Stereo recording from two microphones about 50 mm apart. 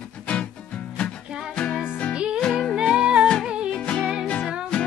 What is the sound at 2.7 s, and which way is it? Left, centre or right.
Music, centre.